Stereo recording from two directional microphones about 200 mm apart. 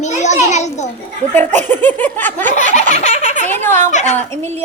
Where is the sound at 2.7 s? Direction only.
35° left (ahead or behind).